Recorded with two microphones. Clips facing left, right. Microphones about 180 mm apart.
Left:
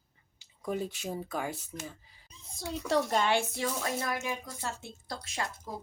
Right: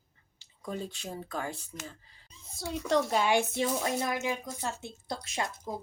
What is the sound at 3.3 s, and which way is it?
Speech, 20° right (ahead or behind).